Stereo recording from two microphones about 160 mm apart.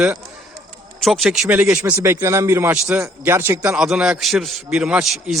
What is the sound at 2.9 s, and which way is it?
A man's voice, 5° right (ahead or behind).